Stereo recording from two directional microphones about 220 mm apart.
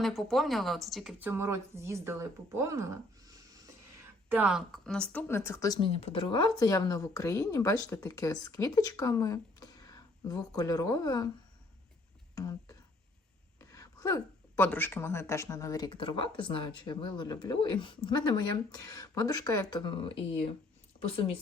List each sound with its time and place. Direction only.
0.0 s speech: centre (ahead or behind)
4.3 s speech: 5° right (ahead or behind); by 11.3 s 15° left (ahead or behind)
12.3 s a sound: 15° left (ahead or behind)
13.6 s a woman's voice: 15° left (ahead or behind)